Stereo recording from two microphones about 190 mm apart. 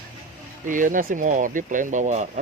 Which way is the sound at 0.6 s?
45° right (ahead or behind).